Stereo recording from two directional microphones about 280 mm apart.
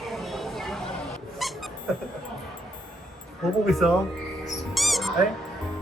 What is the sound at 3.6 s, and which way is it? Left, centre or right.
Speech, centre.